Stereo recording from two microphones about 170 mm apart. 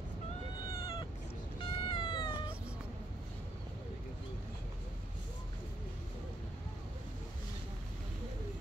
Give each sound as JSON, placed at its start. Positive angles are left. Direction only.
{"t": 0.6, "sound": "cat", "side_deg": 25}